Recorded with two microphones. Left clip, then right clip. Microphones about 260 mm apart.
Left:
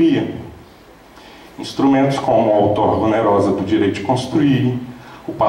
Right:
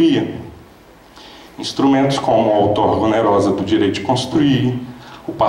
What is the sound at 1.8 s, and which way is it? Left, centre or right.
A man's voice, centre.